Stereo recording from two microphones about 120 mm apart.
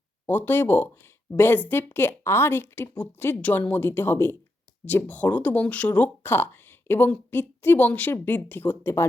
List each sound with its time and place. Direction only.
0.3 s speech: 15° left (ahead or behind)